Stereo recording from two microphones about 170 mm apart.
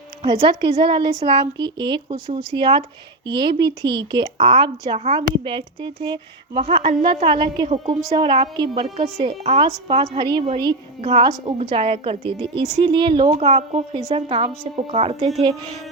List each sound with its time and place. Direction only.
0.4 s a woman's voice: 30° right (ahead or behind)
13.4 s speech: 40° right (ahead or behind)